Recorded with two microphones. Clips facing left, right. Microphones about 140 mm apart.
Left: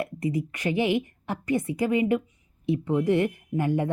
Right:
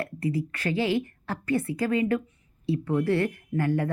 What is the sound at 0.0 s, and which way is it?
A woman's voice, 15° left (ahead or behind).